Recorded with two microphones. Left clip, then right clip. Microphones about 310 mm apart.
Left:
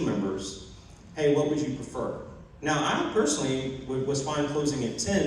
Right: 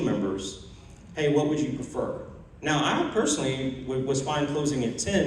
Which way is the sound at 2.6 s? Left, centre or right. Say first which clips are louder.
Right 1 dB; right.